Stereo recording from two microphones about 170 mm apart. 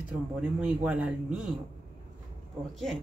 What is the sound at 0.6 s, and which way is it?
Speech, 10° right (ahead or behind).